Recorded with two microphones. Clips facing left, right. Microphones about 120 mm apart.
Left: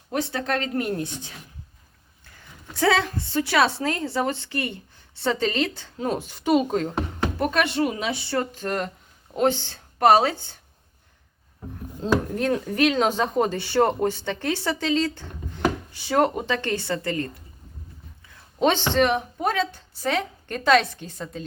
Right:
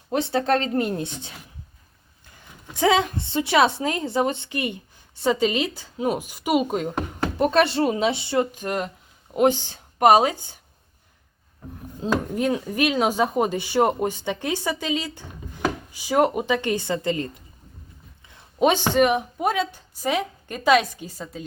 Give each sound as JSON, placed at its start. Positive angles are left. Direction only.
{"t": 0.1, "sound": "speech", "side_deg": -25}
{"t": 2.3, "sound": "a woman's voice", "side_deg": -15}
{"t": 12.0, "sound": "a woman's voice", "side_deg": -10}
{"t": 18.6, "sound": "a woman's voice", "side_deg": -10}